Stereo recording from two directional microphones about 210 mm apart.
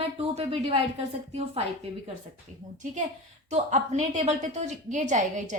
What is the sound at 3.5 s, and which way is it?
A woman's voice, 35° right (ahead or behind).